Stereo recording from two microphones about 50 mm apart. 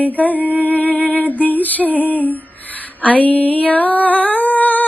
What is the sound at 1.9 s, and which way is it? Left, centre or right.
Female singing, left.